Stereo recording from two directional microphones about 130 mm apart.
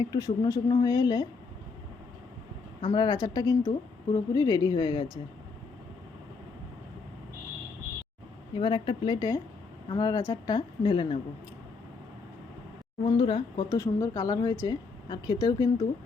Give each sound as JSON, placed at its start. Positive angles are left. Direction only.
{"t": 0.0, "sound": "speech", "side_deg": 30}
{"t": 2.9, "sound": "speech", "side_deg": 35}
{"t": 8.5, "sound": "speech", "side_deg": 40}
{"t": 13.1, "sound": "speech", "side_deg": 40}
{"t": 13.7, "sound": "a woman's voice", "side_deg": 20}